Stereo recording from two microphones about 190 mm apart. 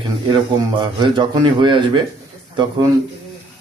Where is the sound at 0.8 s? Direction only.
25° right (ahead or behind).